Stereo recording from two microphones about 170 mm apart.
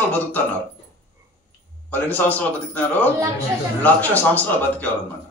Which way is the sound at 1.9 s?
10° left (ahead or behind).